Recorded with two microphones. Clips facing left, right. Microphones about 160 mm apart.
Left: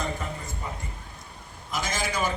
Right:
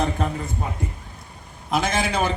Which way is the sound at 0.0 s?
70° right (ahead or behind).